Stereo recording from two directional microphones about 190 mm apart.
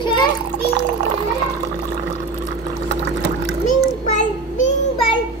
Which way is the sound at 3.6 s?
40° left (ahead or behind).